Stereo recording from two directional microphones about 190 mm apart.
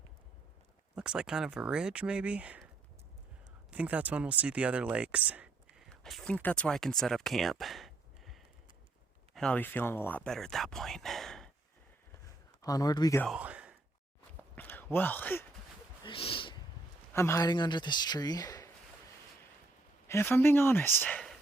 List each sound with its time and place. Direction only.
0.9 s speech: 5° right (ahead or behind)
3.7 s speech: 5° right (ahead or behind)
12.6 s a man's voice: 20° left (ahead or behind)
13.2 s speech: 5° right (ahead or behind)
14.5 s a sound: 10° left (ahead or behind)
16.0 s a sound: 30° left (ahead or behind)
17.2 s a man's voice: 15° left (ahead or behind)
20.1 s speech: 15° left (ahead or behind)